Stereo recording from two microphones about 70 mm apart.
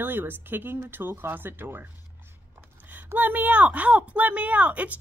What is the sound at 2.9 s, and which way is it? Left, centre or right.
Speech, right.